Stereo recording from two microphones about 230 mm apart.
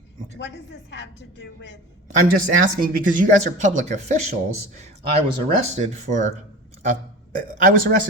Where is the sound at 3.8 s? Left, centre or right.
Right.